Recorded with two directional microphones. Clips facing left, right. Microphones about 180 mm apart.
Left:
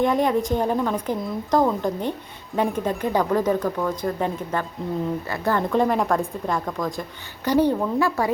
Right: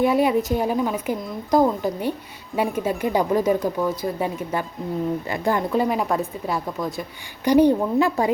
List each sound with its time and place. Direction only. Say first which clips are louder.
0.0 s a woman's voice: right 1 dB; 10° right (ahead or behind)